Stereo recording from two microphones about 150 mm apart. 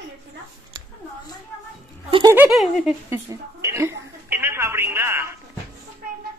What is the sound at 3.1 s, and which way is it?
Telephone, 20° right (ahead or behind).